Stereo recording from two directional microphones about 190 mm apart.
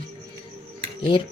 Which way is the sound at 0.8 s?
25° left (ahead or behind).